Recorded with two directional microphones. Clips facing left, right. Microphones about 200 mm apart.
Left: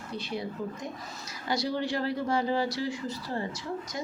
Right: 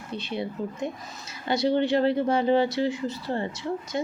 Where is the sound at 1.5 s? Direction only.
25° right (ahead or behind).